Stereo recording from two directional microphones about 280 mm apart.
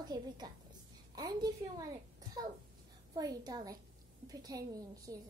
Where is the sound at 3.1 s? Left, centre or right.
Centre.